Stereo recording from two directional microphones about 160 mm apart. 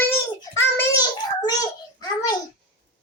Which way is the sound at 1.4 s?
25° left (ahead or behind).